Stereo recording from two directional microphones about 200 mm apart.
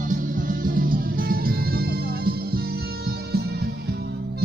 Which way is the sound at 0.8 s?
45° right (ahead or behind).